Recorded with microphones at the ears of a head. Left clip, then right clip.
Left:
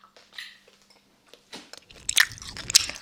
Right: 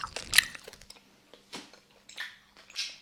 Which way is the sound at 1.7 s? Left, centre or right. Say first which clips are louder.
Left 17 dB; left.